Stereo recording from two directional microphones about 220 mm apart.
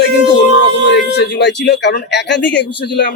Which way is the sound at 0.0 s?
55° left (ahead or behind).